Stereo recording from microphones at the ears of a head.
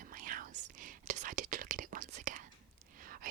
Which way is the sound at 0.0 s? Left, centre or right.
Right.